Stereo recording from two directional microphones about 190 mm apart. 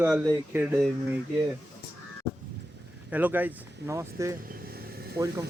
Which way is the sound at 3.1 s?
10° right (ahead or behind).